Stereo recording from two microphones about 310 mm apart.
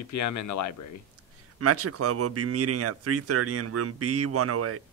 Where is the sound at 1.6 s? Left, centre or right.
Right.